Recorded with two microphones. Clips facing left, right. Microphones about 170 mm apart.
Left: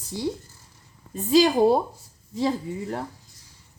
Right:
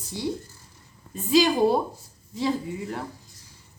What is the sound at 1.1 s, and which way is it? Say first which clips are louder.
A woman's voice: left 2 dB; 40° left (ahead or behind).